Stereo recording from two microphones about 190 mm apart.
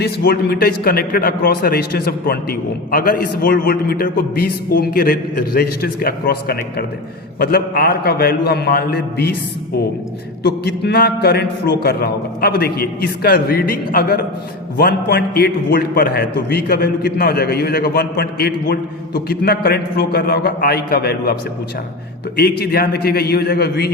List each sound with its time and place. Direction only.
0.0 s a man's voice: 55° left (ahead or behind)
10.4 s a man's voice: 55° left (ahead or behind)
22.4 s a man's voice: 55° left (ahead or behind)